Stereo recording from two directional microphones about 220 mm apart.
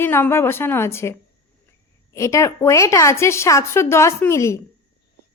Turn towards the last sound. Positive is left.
turn(degrees=10)  # may be behind; listen again after turning